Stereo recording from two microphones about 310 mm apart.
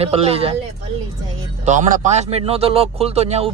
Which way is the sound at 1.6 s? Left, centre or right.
Right.